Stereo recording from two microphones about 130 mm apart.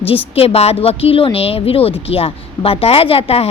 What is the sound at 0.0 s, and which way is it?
A woman's voice, 50° left (ahead or behind).